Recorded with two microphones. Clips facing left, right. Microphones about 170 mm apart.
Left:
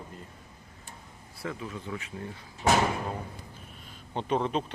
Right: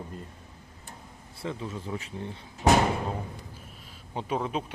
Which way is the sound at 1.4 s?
25° right (ahead or behind).